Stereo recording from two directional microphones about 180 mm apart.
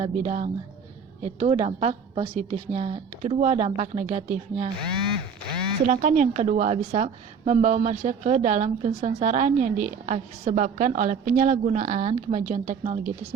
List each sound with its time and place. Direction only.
0.0 s a woman's voice: 40° right (ahead or behind)
4.9 s a sound: 5° left (ahead or behind)
5.9 s a woman's voice: 40° right (ahead or behind)